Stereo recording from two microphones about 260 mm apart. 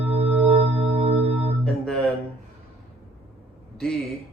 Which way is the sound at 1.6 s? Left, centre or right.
Centre.